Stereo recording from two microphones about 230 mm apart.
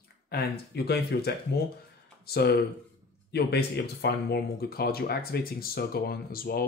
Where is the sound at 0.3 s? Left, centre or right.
Left.